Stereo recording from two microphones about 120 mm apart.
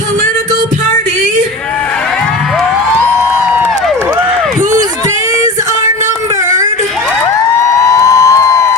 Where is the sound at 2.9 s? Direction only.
15° right (ahead or behind).